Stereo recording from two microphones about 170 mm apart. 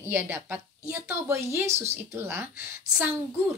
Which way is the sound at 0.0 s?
15° right (ahead or behind).